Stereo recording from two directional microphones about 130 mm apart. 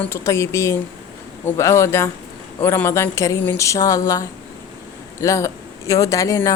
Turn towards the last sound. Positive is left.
turn(degrees=25)  # may be behind; listen again after turning